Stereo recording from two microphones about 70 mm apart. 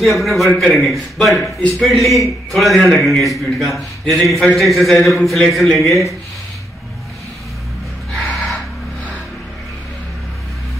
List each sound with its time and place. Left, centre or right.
0.0 s a man's voice: centre
8.1 s gasp: centre